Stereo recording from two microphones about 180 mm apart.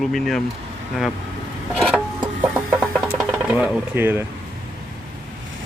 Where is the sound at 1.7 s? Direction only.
Centre (ahead or behind).